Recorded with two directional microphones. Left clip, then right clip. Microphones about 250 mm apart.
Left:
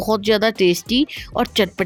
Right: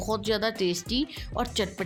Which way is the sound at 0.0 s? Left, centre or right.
Left.